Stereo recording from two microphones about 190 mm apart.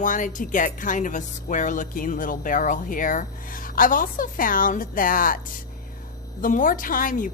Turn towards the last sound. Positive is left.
turn(degrees=45)  # may be behind; listen again after turning